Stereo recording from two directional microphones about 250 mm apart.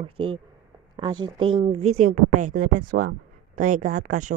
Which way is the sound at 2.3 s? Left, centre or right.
Right.